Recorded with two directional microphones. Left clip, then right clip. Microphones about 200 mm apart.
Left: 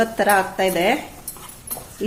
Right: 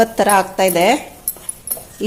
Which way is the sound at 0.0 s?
25° right (ahead or behind).